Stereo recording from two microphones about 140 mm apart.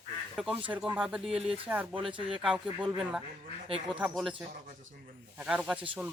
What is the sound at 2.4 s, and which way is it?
Speech, 5° right (ahead or behind).